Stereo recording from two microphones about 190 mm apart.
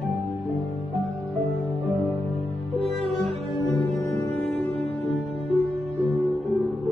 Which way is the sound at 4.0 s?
15° left (ahead or behind).